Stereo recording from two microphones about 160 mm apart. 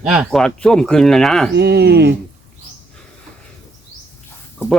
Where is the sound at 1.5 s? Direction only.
90° right.